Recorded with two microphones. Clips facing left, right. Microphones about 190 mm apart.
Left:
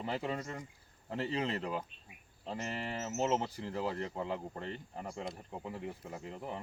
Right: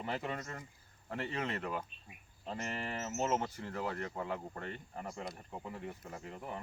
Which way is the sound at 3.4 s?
30° left (ahead or behind).